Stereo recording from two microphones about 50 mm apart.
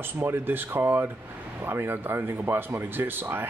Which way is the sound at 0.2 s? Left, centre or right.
Right.